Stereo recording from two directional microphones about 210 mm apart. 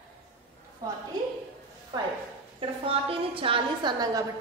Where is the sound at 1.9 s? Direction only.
20° right (ahead or behind).